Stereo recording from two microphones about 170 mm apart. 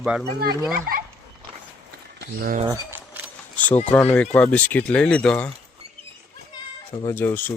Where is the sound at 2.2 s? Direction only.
60° right (ahead or behind).